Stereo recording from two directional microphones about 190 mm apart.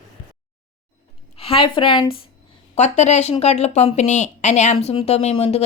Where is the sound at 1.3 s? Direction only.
30° left (ahead or behind).